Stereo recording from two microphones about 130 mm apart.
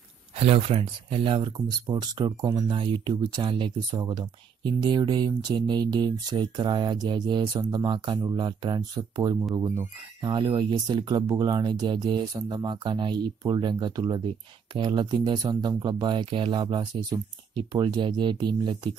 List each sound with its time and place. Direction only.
0.4 s speech: 50° right (ahead or behind); by 9.5 s 30° right (ahead or behind)
10.2 s speech: 40° right (ahead or behind)